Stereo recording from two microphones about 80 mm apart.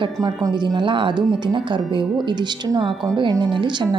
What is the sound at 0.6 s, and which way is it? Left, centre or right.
Speech, right.